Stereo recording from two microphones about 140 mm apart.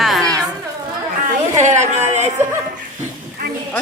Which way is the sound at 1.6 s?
55° right (ahead or behind).